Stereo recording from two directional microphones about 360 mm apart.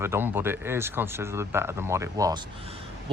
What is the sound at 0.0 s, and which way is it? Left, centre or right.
Speech, centre.